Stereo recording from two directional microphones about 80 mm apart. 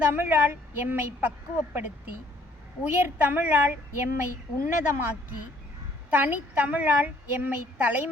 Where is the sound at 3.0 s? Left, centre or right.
Right.